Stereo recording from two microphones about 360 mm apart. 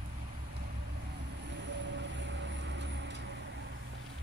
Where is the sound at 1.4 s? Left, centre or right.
Right.